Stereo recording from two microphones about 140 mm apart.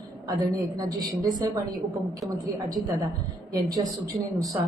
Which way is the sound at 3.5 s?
25° right (ahead or behind).